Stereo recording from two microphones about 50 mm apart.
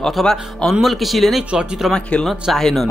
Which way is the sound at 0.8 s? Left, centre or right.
Centre.